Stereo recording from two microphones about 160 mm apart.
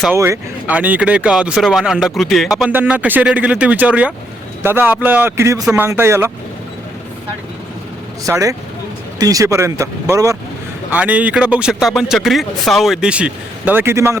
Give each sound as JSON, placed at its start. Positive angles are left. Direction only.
{"t": 0.1, "sound": "speech", "side_deg": -15}
{"t": 8.3, "sound": "speech", "side_deg": -20}
{"t": 10.9, "sound": "speech", "side_deg": -10}